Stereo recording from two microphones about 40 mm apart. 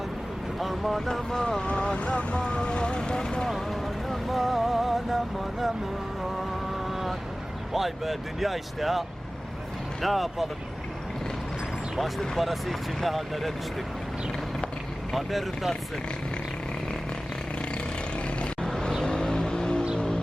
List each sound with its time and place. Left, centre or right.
0.6 s speech: centre
1.3 s speech: centre
1.6 s speech: left
4.3 s speech: centre
7.7 s speech: centre
12.4 s speech: centre
15.1 s speech: centre
18.6 s vehicle: centre